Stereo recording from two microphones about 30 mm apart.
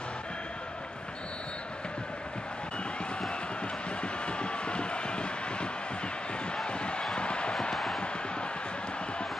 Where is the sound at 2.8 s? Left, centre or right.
Left.